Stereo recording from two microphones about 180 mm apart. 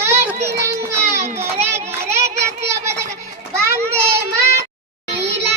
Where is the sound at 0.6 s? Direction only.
15° right (ahead or behind).